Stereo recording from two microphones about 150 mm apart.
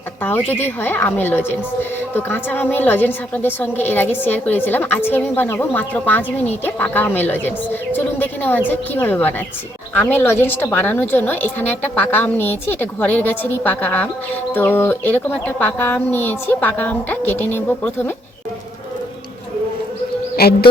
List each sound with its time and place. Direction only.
0.2 s a woman's voice: 15° left (ahead or behind)
20.3 s speech: 90° left